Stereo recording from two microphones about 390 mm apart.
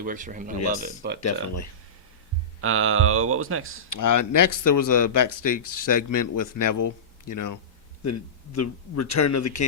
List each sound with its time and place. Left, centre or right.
0.0 s speech: centre
1.2 s speech: left
2.6 s speech: right
3.9 s a man's voice: left